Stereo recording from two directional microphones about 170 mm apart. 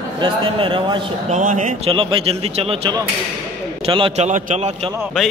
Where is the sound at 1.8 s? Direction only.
30° right (ahead or behind).